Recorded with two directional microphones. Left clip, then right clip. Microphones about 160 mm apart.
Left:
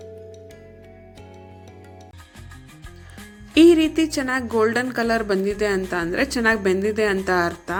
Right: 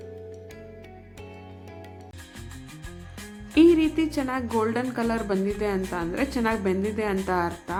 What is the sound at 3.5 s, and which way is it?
A woman's voice, 15° left (ahead or behind).